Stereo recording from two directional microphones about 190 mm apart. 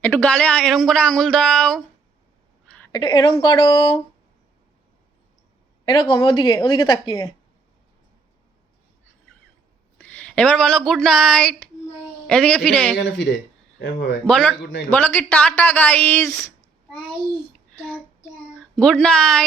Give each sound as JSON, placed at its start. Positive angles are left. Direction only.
{"t": 0.0, "sound": "speech", "side_deg": 10}
{"t": 2.9, "sound": "speech", "side_deg": 25}
{"t": 5.8, "sound": "a woman's voice", "side_deg": 25}
{"t": 10.0, "sound": "speech", "side_deg": 5}
{"t": 13.0, "sound": "speech", "side_deg": 70}
{"t": 13.7, "sound": "speech", "side_deg": 55}
{"t": 14.3, "sound": "speech", "side_deg": 5}
{"t": 18.8, "sound": "speech", "side_deg": 5}